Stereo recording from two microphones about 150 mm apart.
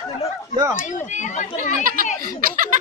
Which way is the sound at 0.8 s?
55° left (ahead or behind).